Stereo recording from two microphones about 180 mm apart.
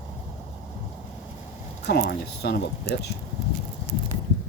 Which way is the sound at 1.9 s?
65° left (ahead or behind).